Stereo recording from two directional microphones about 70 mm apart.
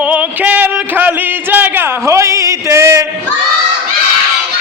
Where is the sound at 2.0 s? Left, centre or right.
Right.